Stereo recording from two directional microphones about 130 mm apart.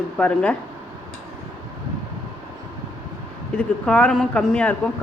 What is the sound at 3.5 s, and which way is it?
Speech, 10° left (ahead or behind).